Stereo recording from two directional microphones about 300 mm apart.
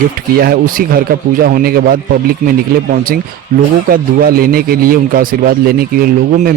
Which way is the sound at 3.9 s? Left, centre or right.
Right.